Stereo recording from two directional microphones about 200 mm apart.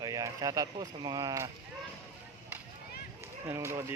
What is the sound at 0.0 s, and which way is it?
Speech, 15° right (ahead or behind).